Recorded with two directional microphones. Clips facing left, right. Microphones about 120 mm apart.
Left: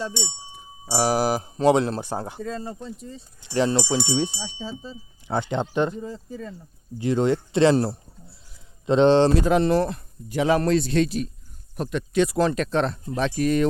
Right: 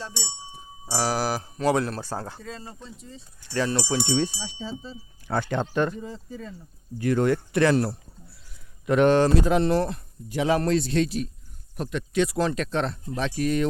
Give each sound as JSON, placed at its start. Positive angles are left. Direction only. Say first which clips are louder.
{"t": 0.9, "sound": "speech", "louder": "left 4 dB", "side_deg": 20}
{"t": 2.4, "sound": "speech", "louder": "left 8 dB", "side_deg": 45}
{"t": 3.4, "sound": "speech", "louder": "left 4 dB", "side_deg": 20}
{"t": 6.0, "sound": "speech", "louder": "left 3 dB", "side_deg": 40}
{"t": 7.0, "sound": "speech", "louder": "left 1 dB", "side_deg": 20}
{"t": 7.5, "sound": "a sound", "louder": "left 6 dB", "side_deg": 25}
{"t": 8.9, "sound": "speech", "louder": "left 2 dB", "side_deg": 25}
{"t": 9.5, "sound": "speech", "louder": "left 2 dB", "side_deg": 90}
{"t": 10.3, "sound": "a man's voice", "louder": "left 2 dB", "side_deg": 65}
{"t": 11.8, "sound": "speech", "louder": "left 3 dB", "side_deg": 35}
{"t": 12.4, "sound": "speech", "louder": "left 3 dB", "side_deg": 45}